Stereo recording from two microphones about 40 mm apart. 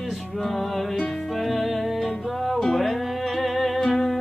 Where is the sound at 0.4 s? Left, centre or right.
Centre.